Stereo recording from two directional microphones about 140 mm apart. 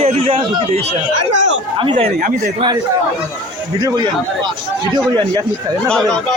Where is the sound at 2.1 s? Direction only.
90° right.